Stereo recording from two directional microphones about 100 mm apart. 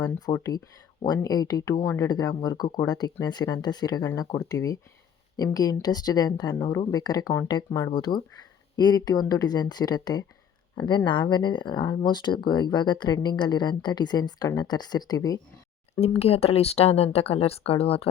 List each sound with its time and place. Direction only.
0.3 s speech: 55° left (ahead or behind)
1.0 s speech: 40° left (ahead or behind)
16.0 s speech: 90° left